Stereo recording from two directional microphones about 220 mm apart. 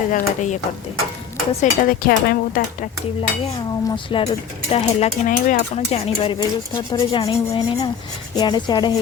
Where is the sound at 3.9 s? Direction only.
25° left (ahead or behind).